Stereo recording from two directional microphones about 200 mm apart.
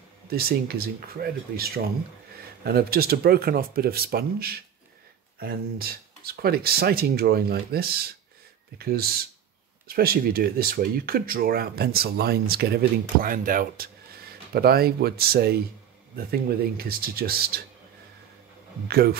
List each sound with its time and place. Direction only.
0.3 s speech: 50° right (ahead or behind)
18.9 s speech: 50° right (ahead or behind)